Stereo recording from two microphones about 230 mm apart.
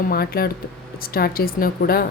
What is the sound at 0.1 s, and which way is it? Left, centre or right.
A woman's voice, left.